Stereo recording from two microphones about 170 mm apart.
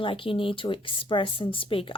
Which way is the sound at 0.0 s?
30° left (ahead or behind).